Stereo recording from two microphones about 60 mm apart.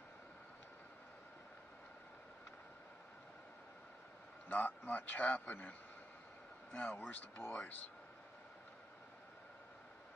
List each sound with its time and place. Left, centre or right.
4.5 s a man's voice: left